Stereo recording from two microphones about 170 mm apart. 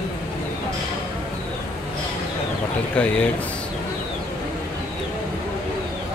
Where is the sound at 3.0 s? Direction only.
5° left (ahead or behind).